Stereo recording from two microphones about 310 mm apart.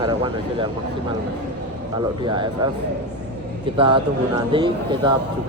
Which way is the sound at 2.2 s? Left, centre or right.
Centre.